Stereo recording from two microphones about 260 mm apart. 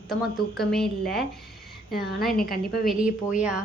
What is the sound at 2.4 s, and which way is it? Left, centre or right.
Speech, left.